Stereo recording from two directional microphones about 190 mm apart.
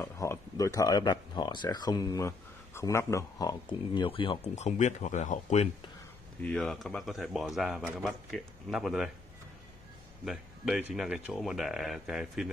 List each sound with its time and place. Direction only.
0.0 s speech: 15° left (ahead or behind); by 5.7 s 40° left (ahead or behind)
6.4 s speech: 5° left (ahead or behind)
10.2 s speech: centre (ahead or behind)